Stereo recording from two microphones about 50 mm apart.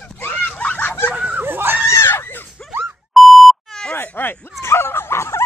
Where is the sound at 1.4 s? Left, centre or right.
Right.